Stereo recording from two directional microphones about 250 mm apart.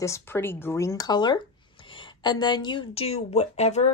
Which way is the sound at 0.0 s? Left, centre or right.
Centre.